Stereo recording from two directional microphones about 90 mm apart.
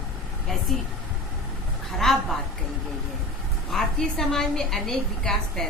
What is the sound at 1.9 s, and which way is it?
Speech, centre (ahead or behind).